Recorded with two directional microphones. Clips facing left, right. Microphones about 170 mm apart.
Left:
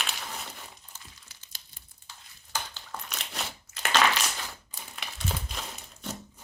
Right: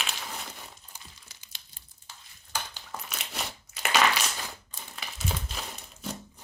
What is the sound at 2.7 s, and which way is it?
Crumpling, 5° right (ahead or behind).